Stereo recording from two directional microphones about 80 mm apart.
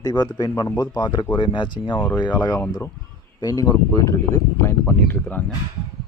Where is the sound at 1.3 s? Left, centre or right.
Left.